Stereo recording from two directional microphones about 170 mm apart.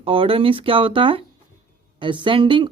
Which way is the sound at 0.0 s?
30° right (ahead or behind).